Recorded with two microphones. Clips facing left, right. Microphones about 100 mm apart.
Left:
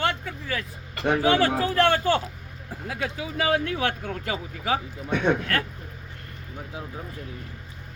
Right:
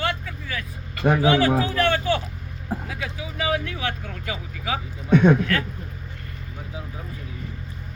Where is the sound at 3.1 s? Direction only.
50° left (ahead or behind).